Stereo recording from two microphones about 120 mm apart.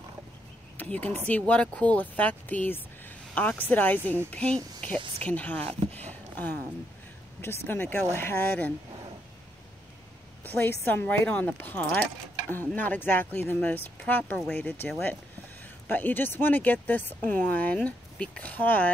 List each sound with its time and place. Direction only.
0.7 s speech: 15° left (ahead or behind)
5.6 s speech: 55° right (ahead or behind)
6.0 s a sound: 15° left (ahead or behind)
7.4 s speech: 15° left (ahead or behind)
10.4 s speech: 15° left (ahead or behind)